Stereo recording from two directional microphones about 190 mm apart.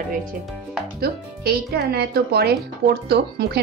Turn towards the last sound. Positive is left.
turn(degrees=-55)  # may be behind; listen again after turning